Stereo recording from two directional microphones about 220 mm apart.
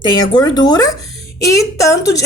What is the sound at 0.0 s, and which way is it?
A woman's voice, 20° left (ahead or behind).